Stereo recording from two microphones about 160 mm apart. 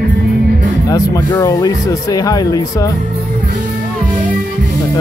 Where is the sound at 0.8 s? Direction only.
25° left (ahead or behind).